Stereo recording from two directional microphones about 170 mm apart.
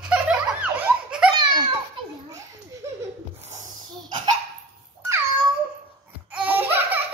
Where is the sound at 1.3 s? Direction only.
25° right (ahead or behind).